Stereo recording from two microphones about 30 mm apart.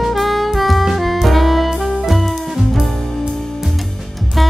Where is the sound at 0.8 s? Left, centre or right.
Centre.